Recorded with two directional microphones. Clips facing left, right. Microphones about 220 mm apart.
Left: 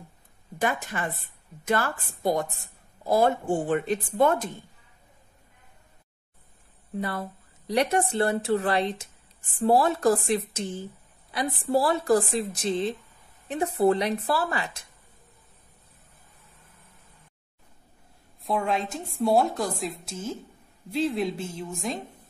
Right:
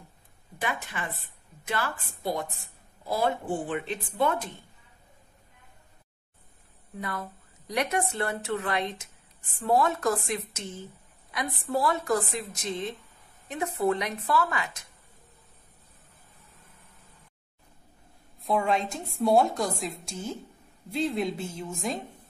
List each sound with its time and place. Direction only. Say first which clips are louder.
0.6 s a woman's voice: left 5 dB; 45° left (ahead or behind)
7.0 s speech: left 5 dB; 30° left (ahead or behind)
18.4 s a woman's voice: right 1 dB; centre (ahead or behind)